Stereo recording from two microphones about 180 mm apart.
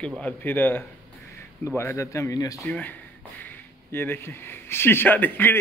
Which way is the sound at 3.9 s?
10° left (ahead or behind).